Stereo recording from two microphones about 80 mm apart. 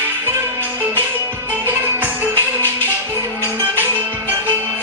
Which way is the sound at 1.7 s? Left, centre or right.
Right.